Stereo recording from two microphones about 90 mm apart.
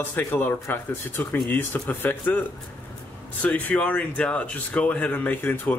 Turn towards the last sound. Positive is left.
turn(degrees=20)  # may be behind; listen again after turning